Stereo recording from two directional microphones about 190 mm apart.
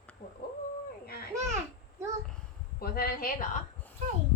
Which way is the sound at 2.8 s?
55° left (ahead or behind).